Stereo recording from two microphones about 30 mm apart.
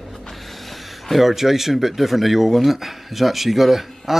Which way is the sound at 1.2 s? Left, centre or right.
Centre.